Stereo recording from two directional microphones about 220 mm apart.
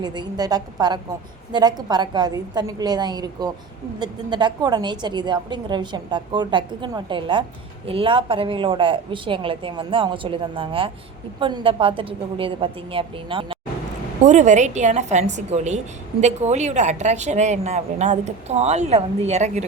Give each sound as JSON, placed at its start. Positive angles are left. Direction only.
{"t": 0.0, "sound": "a woman's voice", "side_deg": -20}